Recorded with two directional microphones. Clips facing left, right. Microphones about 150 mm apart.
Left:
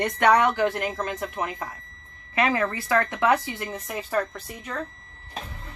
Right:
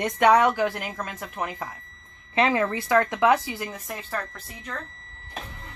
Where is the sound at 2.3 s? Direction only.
25° right (ahead or behind).